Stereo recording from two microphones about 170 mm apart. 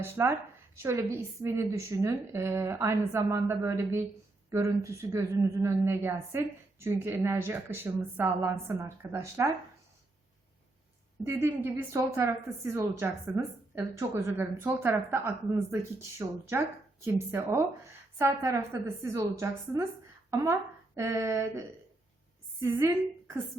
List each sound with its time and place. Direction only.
0.0 s a woman's voice: 15° right (ahead or behind)
11.2 s a woman's voice: 15° right (ahead or behind)
22.6 s a woman's voice: 15° right (ahead or behind)